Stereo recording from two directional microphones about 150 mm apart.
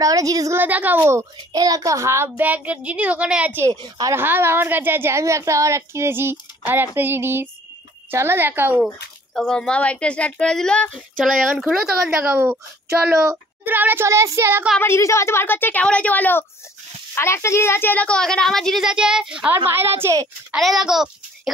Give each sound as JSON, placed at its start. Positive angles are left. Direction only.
{"t": 0.0, "sound": "a child's voice", "side_deg": -25}
{"t": 3.7, "sound": "a woman's voice", "side_deg": -30}
{"t": 4.1, "sound": "a child's voice", "side_deg": -15}
{"t": 9.3, "sound": "a woman's voice", "side_deg": 0}
{"t": 13.7, "sound": "a child's voice", "side_deg": -15}
{"t": 14.8, "sound": "a woman's voice", "side_deg": 20}
{"t": 20.5, "sound": "a woman's voice", "side_deg": 0}